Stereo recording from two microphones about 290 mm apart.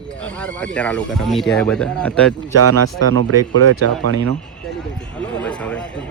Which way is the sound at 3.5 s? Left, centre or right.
Right.